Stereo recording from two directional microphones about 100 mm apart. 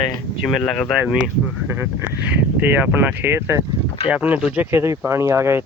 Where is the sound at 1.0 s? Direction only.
10° right (ahead or behind).